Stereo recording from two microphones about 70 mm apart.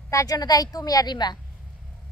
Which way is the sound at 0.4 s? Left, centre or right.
Left.